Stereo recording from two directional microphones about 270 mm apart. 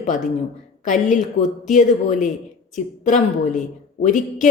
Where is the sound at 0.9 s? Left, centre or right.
Left.